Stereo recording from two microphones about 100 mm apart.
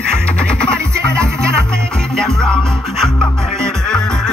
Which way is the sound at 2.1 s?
5° left (ahead or behind).